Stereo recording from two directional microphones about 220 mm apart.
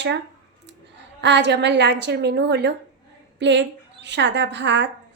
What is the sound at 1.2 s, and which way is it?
A woman's voice, 55° right (ahead or behind).